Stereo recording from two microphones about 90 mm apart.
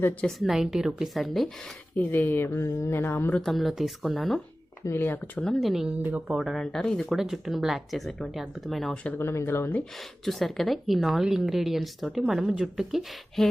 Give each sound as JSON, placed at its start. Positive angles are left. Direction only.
{"t": 0.2, "sound": "speech", "side_deg": 0}
{"t": 2.0, "sound": "speech", "side_deg": 20}
{"t": 3.4, "sound": "speech", "side_deg": 0}
{"t": 4.9, "sound": "speech", "side_deg": 25}
{"t": 5.4, "sound": "speech", "side_deg": 5}
{"t": 6.0, "sound": "speech", "side_deg": -20}
{"t": 6.2, "sound": "speech", "side_deg": -5}
{"t": 9.1, "sound": "speech", "side_deg": 30}
{"t": 10.2, "sound": "speech", "side_deg": 0}